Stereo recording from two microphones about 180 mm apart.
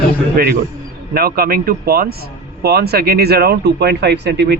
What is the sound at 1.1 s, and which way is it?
Speech, 55° right (ahead or behind).